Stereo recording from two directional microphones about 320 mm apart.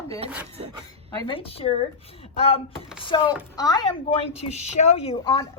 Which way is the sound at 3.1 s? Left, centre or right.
Centre.